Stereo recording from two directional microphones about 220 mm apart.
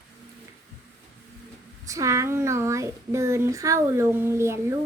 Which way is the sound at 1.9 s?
15° right (ahead or behind).